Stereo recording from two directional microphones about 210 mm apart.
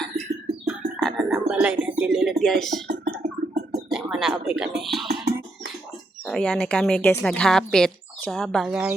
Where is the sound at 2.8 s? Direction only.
50° right (ahead or behind).